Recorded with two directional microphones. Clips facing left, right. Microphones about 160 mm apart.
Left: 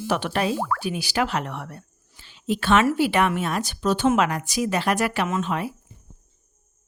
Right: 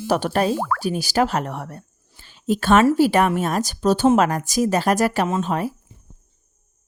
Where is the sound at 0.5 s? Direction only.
75° right (ahead or behind).